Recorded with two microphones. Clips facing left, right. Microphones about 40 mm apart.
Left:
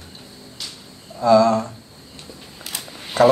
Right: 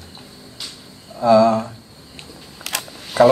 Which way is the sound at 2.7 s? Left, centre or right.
Right.